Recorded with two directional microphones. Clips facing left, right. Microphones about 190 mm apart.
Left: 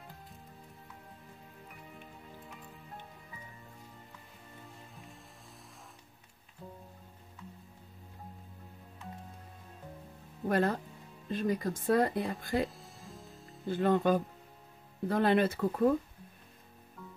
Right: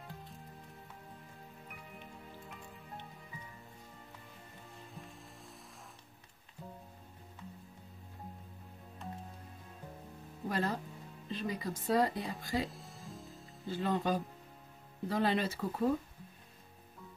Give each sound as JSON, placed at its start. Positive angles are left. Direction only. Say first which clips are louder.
{"t": 10.5, "sound": "speech", "louder": "left 6 dB", "side_deg": 55}
{"t": 12.6, "sound": "music", "louder": "left 4 dB", "side_deg": 0}
{"t": 13.7, "sound": "speech", "louder": "left 6 dB", "side_deg": 55}